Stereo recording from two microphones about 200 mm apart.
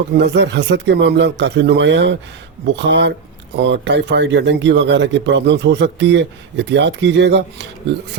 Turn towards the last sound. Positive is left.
turn(degrees=-60)  # may be behind; listen again after turning